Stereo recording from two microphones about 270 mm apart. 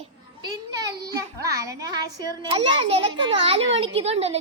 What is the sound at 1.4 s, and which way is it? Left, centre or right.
A child's voice, centre.